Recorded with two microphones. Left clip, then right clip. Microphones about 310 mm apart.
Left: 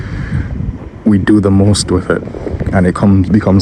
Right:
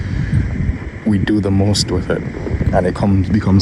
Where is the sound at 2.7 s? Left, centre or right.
Left.